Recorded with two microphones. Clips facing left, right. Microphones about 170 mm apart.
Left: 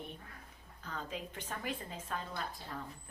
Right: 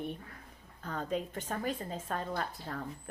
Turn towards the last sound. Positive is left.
turn(degrees=-60)  # may be behind; listen again after turning